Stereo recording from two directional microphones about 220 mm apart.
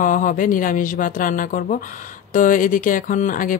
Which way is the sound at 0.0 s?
40° left (ahead or behind).